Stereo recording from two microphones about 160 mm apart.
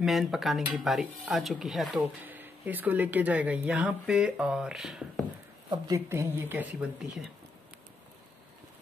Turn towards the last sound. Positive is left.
turn(degrees=-10)  # may be behind; listen again after turning